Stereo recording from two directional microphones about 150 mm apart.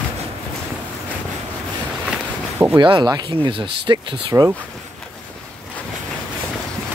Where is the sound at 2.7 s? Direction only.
30° right (ahead or behind).